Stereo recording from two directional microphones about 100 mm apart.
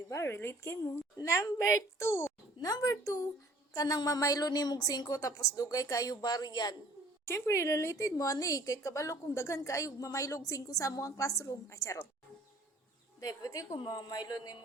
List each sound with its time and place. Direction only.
0.1 s a woman's voice: 25° left (ahead or behind)
7.3 s a woman's voice: 30° left (ahead or behind)
13.1 s a woman's voice: 40° left (ahead or behind)
13.7 s speech: 50° left (ahead or behind)